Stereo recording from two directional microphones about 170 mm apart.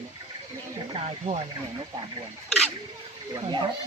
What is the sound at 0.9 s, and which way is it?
Speech, 35° right (ahead or behind).